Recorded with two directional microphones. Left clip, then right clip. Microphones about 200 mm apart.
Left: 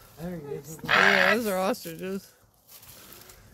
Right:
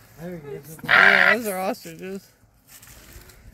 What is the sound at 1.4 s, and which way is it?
Speech, centre (ahead or behind).